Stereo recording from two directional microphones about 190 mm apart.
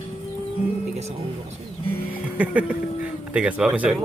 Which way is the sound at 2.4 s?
5° right (ahead or behind).